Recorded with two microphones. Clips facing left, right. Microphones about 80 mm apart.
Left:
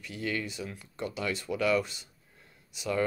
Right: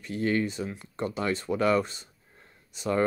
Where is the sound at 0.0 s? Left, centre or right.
Right.